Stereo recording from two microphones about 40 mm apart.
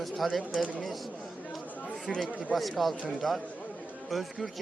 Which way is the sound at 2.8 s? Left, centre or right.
Centre.